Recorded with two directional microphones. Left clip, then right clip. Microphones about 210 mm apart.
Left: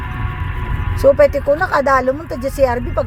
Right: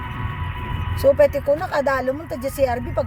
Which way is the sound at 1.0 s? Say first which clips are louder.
Left 4 dB; 15° left (ahead or behind).